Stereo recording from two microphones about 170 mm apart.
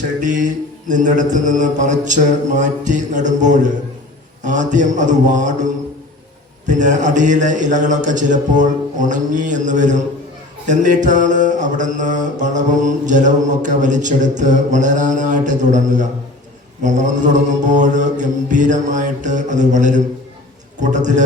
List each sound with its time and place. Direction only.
0.2 s music: 50° right (ahead or behind)